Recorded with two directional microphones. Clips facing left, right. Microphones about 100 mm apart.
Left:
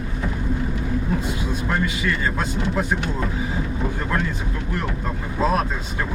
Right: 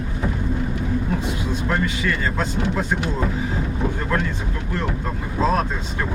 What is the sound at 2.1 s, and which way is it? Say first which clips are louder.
Speech: right 1 dB; 5° left (ahead or behind).